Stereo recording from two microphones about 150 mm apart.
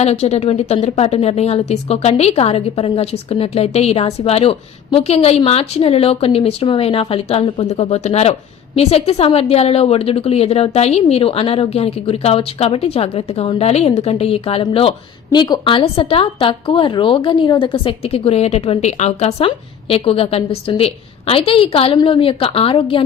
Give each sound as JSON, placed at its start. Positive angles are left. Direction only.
{"t": 0.0, "sound": "a woman's voice", "side_deg": 45}